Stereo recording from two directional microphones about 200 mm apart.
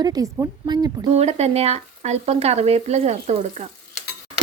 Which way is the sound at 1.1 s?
30° right (ahead or behind).